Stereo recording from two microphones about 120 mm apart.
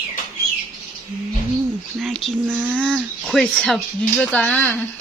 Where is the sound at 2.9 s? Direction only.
Centre (ahead or behind).